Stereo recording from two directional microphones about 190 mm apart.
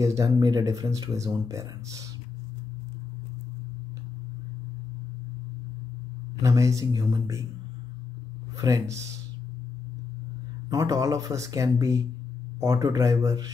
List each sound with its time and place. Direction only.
0.0 s speech: 15° right (ahead or behind)
6.4 s speech: 15° right (ahead or behind)
8.5 s speech: 15° right (ahead or behind)
10.7 s speech: 20° right (ahead or behind)